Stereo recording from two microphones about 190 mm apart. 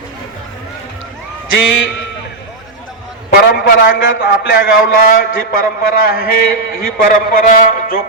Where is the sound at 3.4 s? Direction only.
60° left (ahead or behind).